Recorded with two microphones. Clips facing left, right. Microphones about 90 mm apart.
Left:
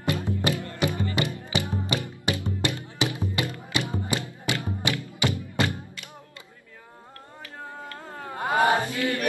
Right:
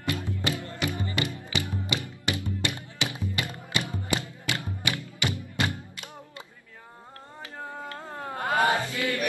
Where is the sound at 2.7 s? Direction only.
20° right (ahead or behind).